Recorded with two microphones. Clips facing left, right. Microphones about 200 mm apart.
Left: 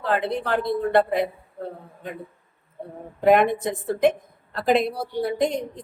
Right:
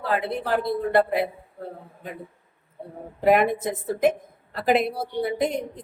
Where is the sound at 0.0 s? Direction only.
5° right (ahead or behind).